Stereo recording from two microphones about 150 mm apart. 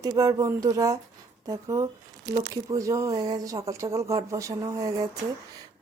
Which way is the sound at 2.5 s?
20° right (ahead or behind).